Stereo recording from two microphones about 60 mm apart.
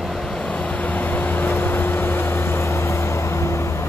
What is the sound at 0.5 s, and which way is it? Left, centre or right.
Vehicle, centre.